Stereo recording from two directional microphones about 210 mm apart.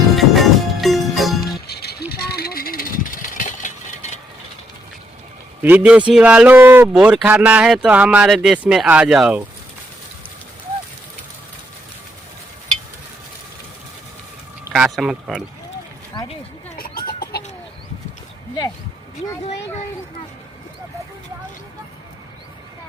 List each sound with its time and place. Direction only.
0.2 s music: centre (ahead or behind)
1.4 s music: 50° left (ahead or behind)
2.2 s vehicle: 50° left (ahead or behind)
5.6 s a man's voice: 5° right (ahead or behind)
14.7 s speech: centre (ahead or behind)
16.1 s a sound: 20° left (ahead or behind)
16.7 s chicken: 45° left (ahead or behind)